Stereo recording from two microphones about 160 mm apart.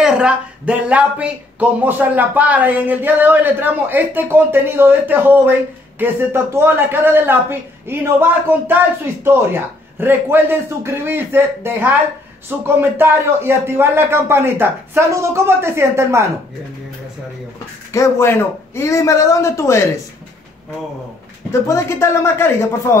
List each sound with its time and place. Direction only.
0.0 s speech: 5° right (ahead or behind)
17.9 s a man's voice: 15° left (ahead or behind)
21.5 s a man's voice: 15° left (ahead or behind)